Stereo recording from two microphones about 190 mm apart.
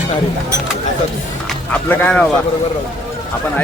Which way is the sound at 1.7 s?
10° left (ahead or behind).